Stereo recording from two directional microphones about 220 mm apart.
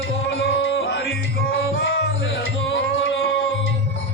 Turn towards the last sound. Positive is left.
turn(degrees=60)  # may be behind; listen again after turning